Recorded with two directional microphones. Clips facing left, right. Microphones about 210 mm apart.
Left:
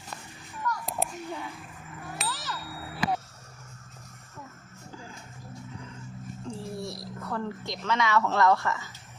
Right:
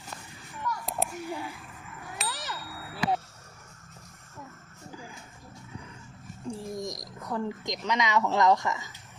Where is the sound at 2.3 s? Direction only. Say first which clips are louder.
Left 1 dB; 20° right (ahead or behind).